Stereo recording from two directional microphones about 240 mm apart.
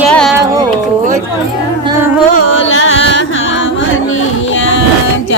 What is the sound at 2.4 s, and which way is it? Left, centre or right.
Carnatic music, left.